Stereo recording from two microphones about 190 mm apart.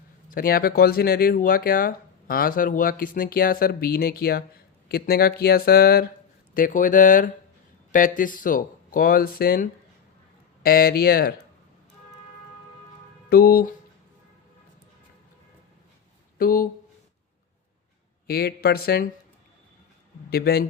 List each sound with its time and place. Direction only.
0.3 s speech: 50° left (ahead or behind)
13.3 s speech: 55° left (ahead or behind)
16.4 s speech: 50° left (ahead or behind)
18.3 s speech: 55° left (ahead or behind)
20.3 s speech: 55° left (ahead or behind)